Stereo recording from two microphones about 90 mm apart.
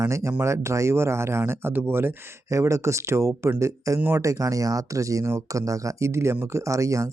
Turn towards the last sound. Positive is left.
turn(degrees=-35)  # may be behind; listen again after turning